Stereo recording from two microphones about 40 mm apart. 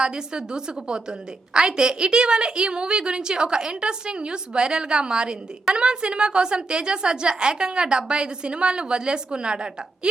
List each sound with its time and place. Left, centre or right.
0.0 s a woman's voice: centre